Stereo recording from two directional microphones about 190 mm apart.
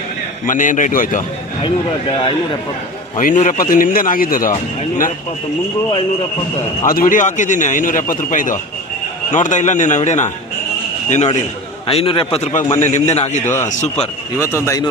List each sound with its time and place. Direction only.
0.4 s a man's voice: 45° left (ahead or behind)
1.6 s speech: 25° left (ahead or behind)
3.2 s a man's voice: 45° left (ahead or behind)
6.8 s a man's voice: 45° left (ahead or behind)
14.6 s a man's voice: 15° left (ahead or behind)